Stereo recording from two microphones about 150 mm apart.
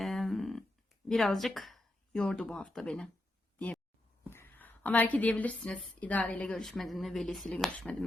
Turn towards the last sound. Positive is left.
turn(degrees=5)  # may be behind; listen again after turning